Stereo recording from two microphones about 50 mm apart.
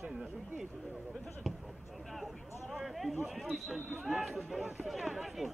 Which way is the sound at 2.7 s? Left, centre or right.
Centre.